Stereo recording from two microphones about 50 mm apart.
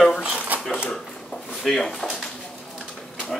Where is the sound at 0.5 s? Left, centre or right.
Right.